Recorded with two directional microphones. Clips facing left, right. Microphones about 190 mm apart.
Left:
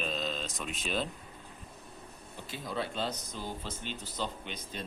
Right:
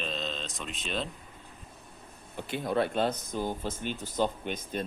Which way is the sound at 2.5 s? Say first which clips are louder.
Right 8 dB; 60° right (ahead or behind).